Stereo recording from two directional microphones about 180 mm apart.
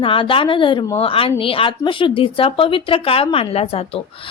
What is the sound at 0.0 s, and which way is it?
A woman's voice, 30° left (ahead or behind).